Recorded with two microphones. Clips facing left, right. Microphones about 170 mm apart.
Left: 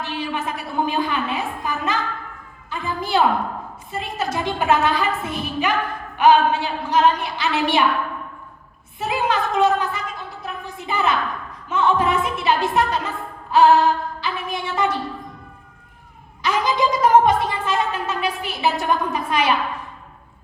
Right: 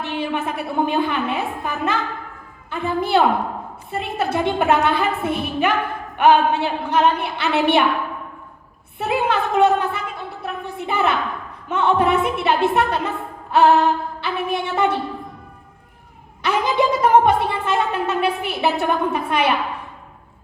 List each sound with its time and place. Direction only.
0.0 s a woman's voice: 60° right (ahead or behind)
9.0 s a woman's voice: 60° right (ahead or behind)
16.4 s a woman's voice: 60° right (ahead or behind)